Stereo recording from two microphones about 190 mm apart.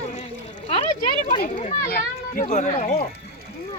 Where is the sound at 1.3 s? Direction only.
45° left (ahead or behind).